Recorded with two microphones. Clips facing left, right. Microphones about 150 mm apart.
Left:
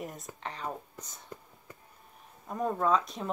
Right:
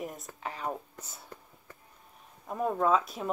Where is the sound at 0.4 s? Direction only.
10° right (ahead or behind).